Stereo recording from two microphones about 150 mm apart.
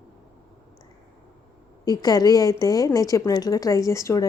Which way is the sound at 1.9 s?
25° left (ahead or behind).